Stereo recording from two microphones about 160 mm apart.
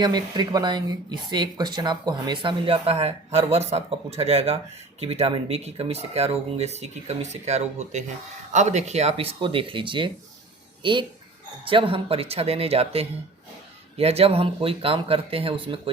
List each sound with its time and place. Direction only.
0.0 s speech: 25° right (ahead or behind)